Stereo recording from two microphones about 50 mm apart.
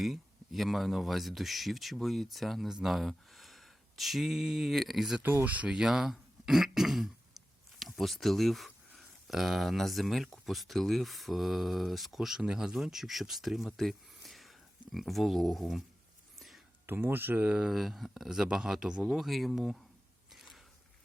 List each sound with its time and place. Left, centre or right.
0.0 s speech: centre
5.2 s speech: right
5.6 s speech: centre
16.8 s speech: right
17.7 s a man's voice: centre
19.0 s speech: centre
20.3 s biting: centre